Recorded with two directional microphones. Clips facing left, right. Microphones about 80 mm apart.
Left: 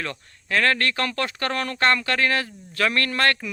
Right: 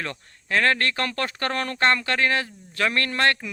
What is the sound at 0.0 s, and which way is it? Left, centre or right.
A man's voice, right.